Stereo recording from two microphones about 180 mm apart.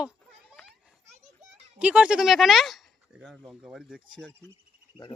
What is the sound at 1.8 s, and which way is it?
Speech, 5° right (ahead or behind).